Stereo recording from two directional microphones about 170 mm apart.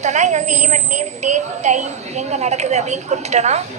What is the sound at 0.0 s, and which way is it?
A woman's voice, 45° right (ahead or behind).